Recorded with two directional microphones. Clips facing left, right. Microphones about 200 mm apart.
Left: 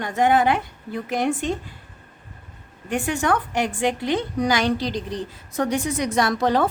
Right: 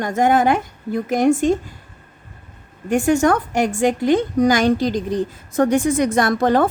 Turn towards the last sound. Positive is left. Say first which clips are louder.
# right 4 dB
turn(degrees=-50)  # may be behind; listen again after turning